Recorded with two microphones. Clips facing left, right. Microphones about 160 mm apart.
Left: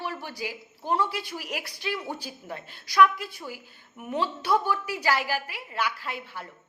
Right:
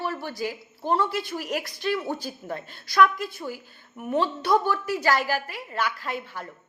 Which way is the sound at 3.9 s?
40° right (ahead or behind).